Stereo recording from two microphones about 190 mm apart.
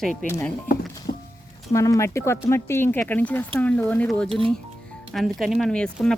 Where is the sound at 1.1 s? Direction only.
50° left (ahead or behind).